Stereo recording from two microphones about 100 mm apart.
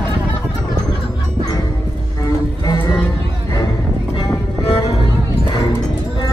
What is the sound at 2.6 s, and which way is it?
Music, 40° left (ahead or behind).